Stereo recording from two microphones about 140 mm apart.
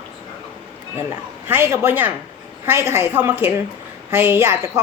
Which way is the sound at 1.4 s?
15° right (ahead or behind).